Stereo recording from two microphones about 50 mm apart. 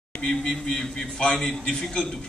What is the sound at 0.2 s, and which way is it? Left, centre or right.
A man's voice, centre.